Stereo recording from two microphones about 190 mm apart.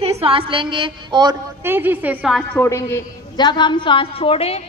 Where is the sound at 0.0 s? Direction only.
30° right (ahead or behind).